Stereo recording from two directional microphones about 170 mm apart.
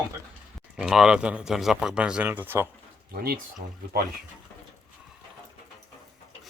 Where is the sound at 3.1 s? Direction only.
65° right (ahead or behind).